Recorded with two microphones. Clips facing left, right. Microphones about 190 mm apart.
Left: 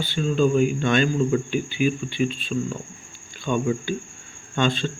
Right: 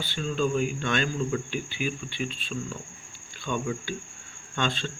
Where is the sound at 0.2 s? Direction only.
10° left (ahead or behind).